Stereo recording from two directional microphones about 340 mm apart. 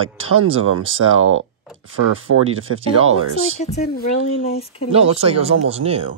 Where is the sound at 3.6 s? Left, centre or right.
Centre.